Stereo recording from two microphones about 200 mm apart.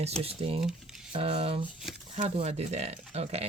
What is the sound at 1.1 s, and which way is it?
Speech, 30° right (ahead or behind).